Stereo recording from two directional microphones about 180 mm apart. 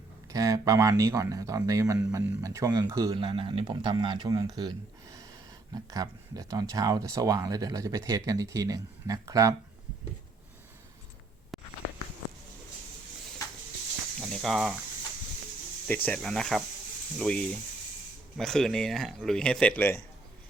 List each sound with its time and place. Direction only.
0.3 s speech: 20° right (ahead or behind)
5.7 s speech: 20° right (ahead or behind)
11.5 s a sound: centre (ahead or behind)
14.2 s speech: centre (ahead or behind)
16.0 s speech: 5° left (ahead or behind)